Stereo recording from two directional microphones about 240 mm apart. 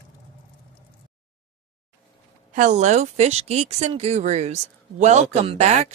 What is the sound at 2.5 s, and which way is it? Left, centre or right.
A woman's voice, right.